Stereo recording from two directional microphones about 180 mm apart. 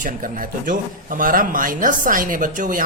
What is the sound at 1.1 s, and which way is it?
Speech, 50° right (ahead or behind).